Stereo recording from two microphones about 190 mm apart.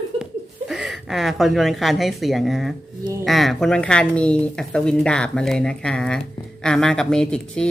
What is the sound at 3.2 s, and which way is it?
A woman's voice, centre (ahead or behind).